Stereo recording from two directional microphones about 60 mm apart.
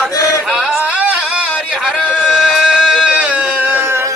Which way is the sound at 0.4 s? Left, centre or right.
Centre.